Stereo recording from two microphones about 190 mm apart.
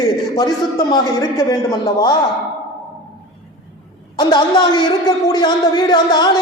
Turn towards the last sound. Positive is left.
turn(degrees=20)  # may be behind; listen again after turning